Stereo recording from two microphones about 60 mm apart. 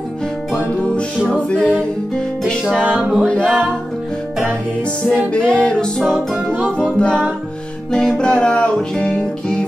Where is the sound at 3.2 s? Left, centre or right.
Centre.